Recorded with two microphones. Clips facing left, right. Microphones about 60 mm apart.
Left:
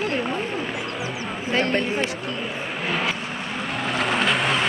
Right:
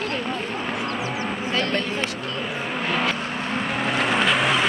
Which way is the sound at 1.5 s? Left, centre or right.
Left.